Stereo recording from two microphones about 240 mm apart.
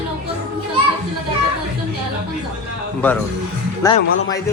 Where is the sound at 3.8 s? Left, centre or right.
Centre.